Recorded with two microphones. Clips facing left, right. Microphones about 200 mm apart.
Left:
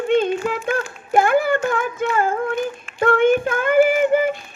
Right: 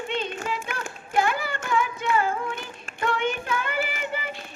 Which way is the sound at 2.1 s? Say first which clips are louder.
Left 4 dB; 50° left (ahead or behind).